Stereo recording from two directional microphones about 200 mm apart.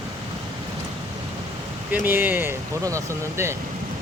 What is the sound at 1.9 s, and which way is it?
Speech, 10° right (ahead or behind).